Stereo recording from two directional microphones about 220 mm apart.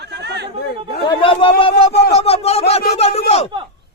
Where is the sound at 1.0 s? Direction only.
25° left (ahead or behind).